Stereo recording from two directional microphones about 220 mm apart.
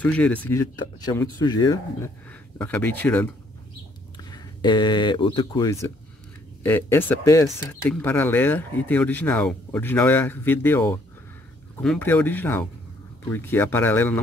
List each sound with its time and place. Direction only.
0.0 s speech: 5° left (ahead or behind)
2.6 s speech: 5° left (ahead or behind)
4.2 s speech: 20° left (ahead or behind)